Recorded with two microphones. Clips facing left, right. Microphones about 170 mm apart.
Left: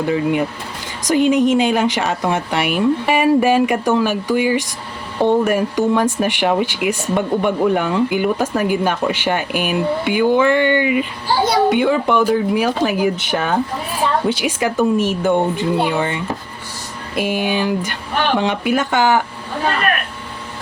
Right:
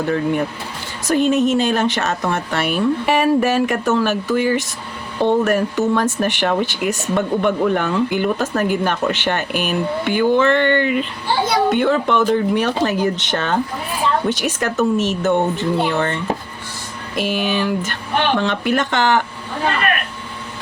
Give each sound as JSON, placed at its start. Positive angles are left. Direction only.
{"t": 0.0, "sound": "speech", "side_deg": 10}
{"t": 11.3, "sound": "a child's voice", "side_deg": 40}
{"t": 11.7, "sound": "speech", "side_deg": 10}
{"t": 17.4, "sound": "speech", "side_deg": 10}